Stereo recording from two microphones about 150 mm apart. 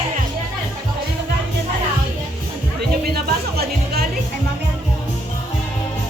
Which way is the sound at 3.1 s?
90° right.